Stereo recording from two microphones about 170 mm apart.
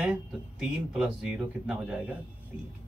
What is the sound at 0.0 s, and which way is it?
Speech, 5° right (ahead or behind).